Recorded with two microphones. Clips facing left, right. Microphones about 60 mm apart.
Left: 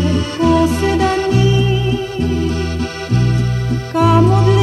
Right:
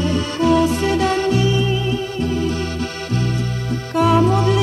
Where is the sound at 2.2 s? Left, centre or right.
Centre.